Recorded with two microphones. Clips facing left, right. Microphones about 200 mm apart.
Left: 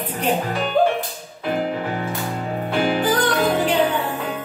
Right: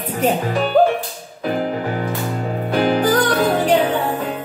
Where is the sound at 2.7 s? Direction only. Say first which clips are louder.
Right 4 dB; 45° right (ahead or behind).